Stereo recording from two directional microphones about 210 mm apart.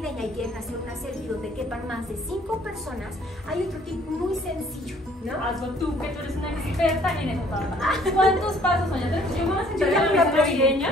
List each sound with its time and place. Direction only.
0.0 s music: centre (ahead or behind)
3.4 s a woman's voice: centre (ahead or behind)
5.5 s a woman's voice: centre (ahead or behind)